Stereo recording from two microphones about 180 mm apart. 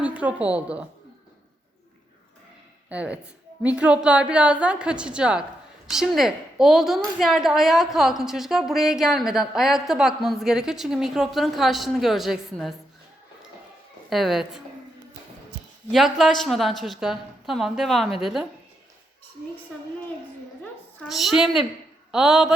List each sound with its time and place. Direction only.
0.0 s a woman's voice: 10° right (ahead or behind)
2.9 s a woman's voice: 5° right (ahead or behind)
14.1 s a woman's voice: centre (ahead or behind)
15.9 s a woman's voice: centre (ahead or behind)
21.0 s a woman's voice: centre (ahead or behind)